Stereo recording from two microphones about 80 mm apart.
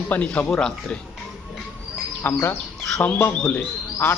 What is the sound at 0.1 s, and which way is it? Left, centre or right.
Speech, centre.